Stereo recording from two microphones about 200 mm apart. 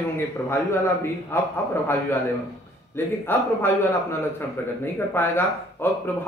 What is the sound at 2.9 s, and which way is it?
Speech, 10° left (ahead or behind).